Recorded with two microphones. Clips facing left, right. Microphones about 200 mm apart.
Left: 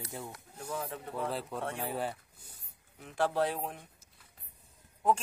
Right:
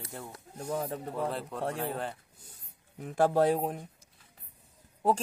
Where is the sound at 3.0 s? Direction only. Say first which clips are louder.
Right 6 dB; 45° right (ahead or behind).